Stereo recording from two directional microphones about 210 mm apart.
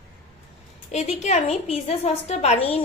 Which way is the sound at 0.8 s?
30° left (ahead or behind).